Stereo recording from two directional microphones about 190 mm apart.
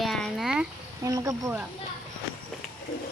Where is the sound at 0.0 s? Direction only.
Centre (ahead or behind).